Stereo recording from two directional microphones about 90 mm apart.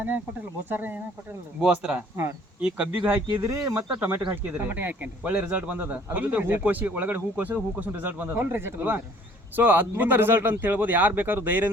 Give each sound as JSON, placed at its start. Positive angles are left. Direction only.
{"t": 0.7, "sound": "speech", "side_deg": -20}
{"t": 1.6, "sound": "speech", "side_deg": -10}
{"t": 3.1, "sound": "speech", "side_deg": -25}